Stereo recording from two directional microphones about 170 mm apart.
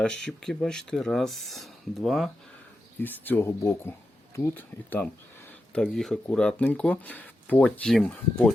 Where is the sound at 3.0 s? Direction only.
10° left (ahead or behind).